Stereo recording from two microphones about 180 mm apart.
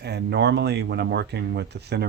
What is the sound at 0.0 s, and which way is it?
Speech, 65° right (ahead or behind).